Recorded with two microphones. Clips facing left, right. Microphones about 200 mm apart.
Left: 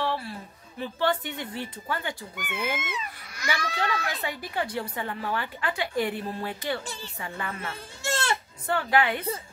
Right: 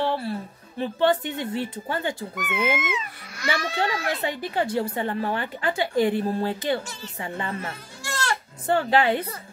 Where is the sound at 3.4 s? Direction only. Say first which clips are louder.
Right 4 dB; 25° right (ahead or behind).